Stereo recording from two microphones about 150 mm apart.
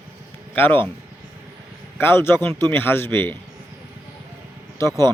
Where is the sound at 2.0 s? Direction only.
15° left (ahead or behind).